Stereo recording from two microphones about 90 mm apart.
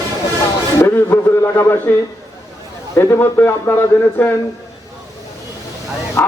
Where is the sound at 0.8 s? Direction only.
30° left (ahead or behind).